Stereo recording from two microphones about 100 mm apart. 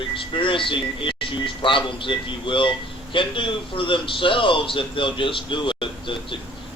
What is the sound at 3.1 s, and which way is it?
A man's voice, 60° left (ahead or behind).